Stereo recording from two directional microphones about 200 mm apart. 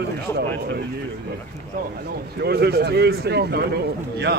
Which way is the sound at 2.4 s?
55° right (ahead or behind).